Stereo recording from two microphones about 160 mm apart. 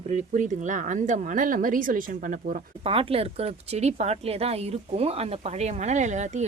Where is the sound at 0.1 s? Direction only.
45° right (ahead or behind).